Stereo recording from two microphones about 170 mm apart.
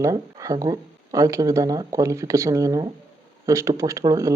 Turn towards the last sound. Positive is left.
turn(degrees=-20)  # may be behind; listen again after turning